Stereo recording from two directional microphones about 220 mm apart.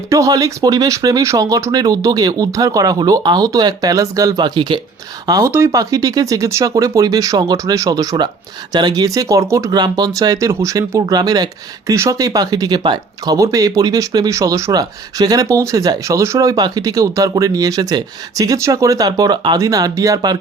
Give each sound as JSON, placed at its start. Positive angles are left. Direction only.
{"t": 0.1, "sound": "speech", "side_deg": -15}